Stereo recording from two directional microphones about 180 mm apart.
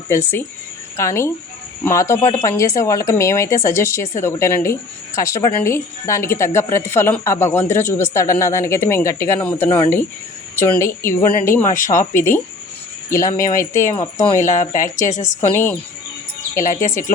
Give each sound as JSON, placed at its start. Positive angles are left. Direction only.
{"t": 0.1, "sound": "speech", "side_deg": 15}
{"t": 11.6, "sound": "a woman's voice", "side_deg": 45}
{"t": 13.1, "sound": "speech", "side_deg": 15}
{"t": 14.4, "sound": "a woman's voice", "side_deg": 45}
{"t": 15.5, "sound": "speech", "side_deg": 10}